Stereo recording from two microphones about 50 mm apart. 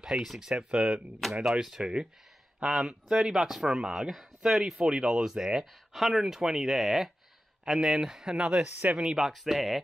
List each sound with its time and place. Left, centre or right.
0.0 s speech: centre
8.7 s speech: right
9.0 s speech: centre